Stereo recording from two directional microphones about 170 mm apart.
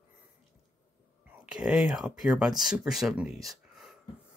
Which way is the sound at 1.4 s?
5° right (ahead or behind).